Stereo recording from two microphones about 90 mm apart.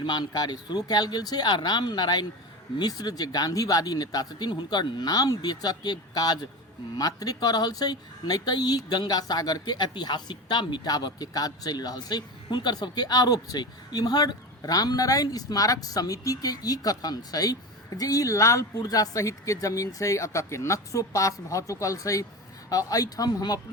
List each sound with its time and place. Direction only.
0.0 s speech: 55° left (ahead or behind)